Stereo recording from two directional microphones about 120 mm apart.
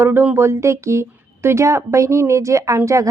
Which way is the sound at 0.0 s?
20° right (ahead or behind).